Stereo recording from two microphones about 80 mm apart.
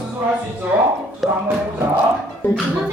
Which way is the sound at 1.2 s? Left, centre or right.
Centre.